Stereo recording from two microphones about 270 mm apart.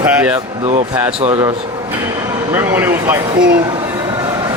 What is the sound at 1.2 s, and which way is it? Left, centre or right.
Speech, right.